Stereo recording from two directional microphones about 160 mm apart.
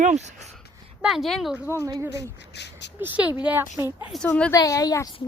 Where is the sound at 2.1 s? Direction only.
90° left.